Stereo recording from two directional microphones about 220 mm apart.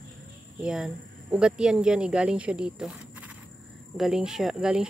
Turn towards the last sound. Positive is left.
turn(degrees=-5)  # may be behind; listen again after turning